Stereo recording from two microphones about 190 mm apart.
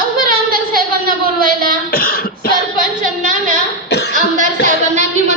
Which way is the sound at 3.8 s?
60° left (ahead or behind).